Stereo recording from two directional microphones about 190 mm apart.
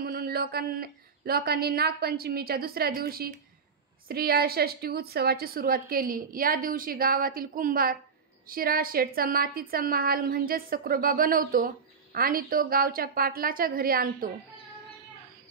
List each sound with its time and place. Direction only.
0.0 s a woman's voice: 55° right (ahead or behind)